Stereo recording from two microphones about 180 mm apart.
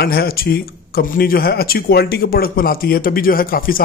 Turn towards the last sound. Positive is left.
turn(degrees=55)  # may be behind; listen again after turning